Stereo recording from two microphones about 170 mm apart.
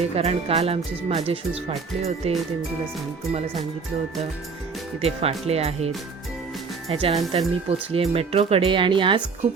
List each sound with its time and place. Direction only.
0.2 s speech: 35° right (ahead or behind)
5.0 s speech: 35° right (ahead or behind)
6.9 s speech: 35° right (ahead or behind)